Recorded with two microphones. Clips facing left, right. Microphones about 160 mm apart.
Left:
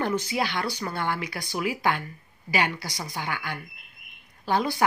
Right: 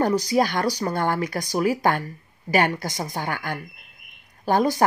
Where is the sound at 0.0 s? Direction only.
40° right (ahead or behind).